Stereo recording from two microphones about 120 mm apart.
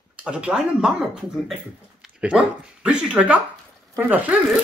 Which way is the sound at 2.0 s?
10° right (ahead or behind).